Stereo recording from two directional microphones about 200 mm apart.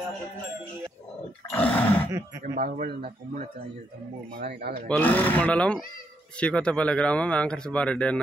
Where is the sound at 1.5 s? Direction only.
10° left (ahead or behind).